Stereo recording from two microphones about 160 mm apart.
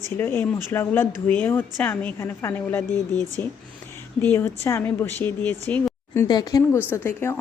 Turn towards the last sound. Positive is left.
turn(degrees=15)  # may be behind; listen again after turning